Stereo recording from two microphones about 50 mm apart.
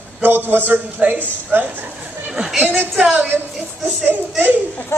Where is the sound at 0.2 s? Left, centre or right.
Right.